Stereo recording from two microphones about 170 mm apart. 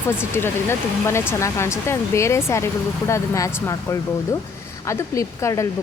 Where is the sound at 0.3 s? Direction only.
15° left (ahead or behind).